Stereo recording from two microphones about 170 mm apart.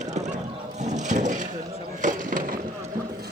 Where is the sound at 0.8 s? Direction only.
45° right (ahead or behind).